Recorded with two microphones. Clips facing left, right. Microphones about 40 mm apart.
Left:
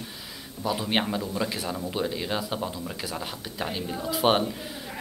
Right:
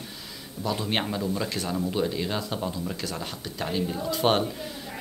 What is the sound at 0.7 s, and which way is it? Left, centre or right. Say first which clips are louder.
Speech: left 1 dB; centre.